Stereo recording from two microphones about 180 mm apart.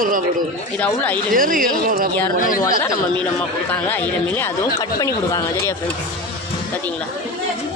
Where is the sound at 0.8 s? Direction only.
10° left (ahead or behind).